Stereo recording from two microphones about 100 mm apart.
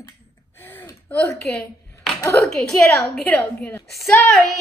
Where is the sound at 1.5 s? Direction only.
5° left (ahead or behind).